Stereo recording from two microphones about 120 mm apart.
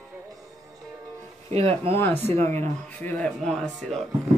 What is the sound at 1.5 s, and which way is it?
Speech, 60° right (ahead or behind).